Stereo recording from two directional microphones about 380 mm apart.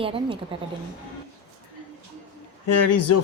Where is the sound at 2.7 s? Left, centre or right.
Left.